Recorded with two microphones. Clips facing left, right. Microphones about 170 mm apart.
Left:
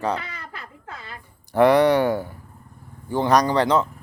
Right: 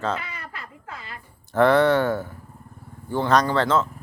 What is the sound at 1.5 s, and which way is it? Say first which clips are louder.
Speech: left 2 dB; 15° left (ahead or behind).